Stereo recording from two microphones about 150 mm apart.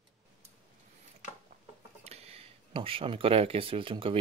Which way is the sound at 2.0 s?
45° right (ahead or behind).